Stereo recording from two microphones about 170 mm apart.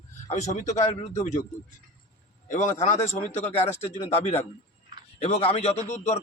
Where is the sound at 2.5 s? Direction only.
45° left (ahead or behind).